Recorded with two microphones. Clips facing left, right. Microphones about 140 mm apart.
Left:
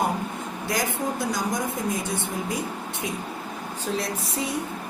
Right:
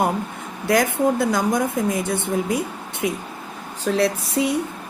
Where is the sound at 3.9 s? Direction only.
90° right.